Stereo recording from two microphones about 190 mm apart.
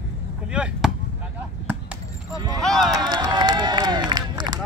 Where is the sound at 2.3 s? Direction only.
20° right (ahead or behind).